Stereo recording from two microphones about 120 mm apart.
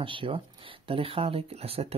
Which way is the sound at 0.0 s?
45° right (ahead or behind).